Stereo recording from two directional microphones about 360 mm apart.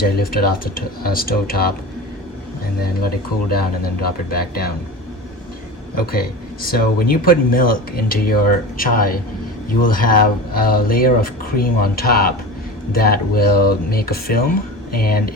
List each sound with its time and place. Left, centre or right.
0.0 s speech: left
3.5 s speech: left
6.1 s speech: left